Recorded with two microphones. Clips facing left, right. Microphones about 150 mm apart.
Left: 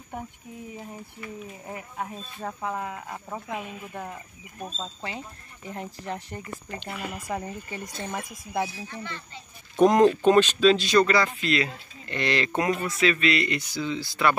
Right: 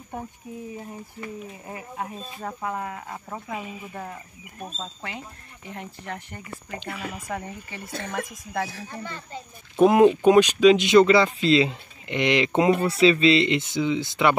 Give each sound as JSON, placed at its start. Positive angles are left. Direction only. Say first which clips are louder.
{"t": 1.7, "sound": "speech", "louder": "right 1 dB", "side_deg": -10}
{"t": 5.7, "sound": "speech", "louder": "left 2 dB", "side_deg": 35}
{"t": 6.9, "sound": "speech", "louder": "even", "side_deg": 0}
{"t": 9.0, "sound": "a child's voice", "louder": "right 3 dB", "side_deg": -45}
{"t": 9.8, "sound": "speech", "louder": "right 2 dB", "side_deg": -5}